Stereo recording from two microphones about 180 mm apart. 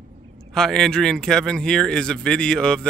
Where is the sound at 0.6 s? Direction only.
5° left (ahead or behind).